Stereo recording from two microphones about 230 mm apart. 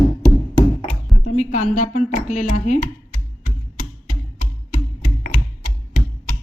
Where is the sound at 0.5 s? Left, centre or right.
Left.